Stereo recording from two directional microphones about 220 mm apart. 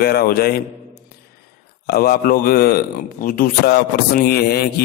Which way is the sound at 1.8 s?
45° left (ahead or behind).